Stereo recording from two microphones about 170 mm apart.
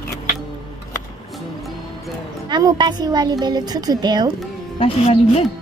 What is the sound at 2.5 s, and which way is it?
A woman's voice, 25° right (ahead or behind).